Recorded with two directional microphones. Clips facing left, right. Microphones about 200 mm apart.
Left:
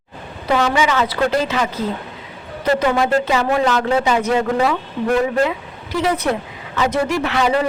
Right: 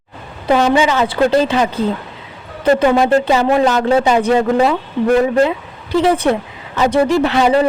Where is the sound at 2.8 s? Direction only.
30° right (ahead or behind).